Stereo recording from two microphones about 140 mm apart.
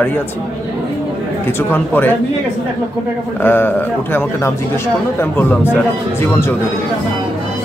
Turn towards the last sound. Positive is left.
turn(degrees=15)  # may be behind; listen again after turning